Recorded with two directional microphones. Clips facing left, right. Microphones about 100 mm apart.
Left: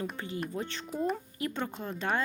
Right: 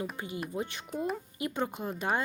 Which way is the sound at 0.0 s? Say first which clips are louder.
Left 1 dB; 15° right (ahead or behind).